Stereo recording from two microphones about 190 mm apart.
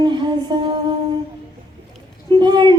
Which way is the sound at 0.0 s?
25° right (ahead or behind).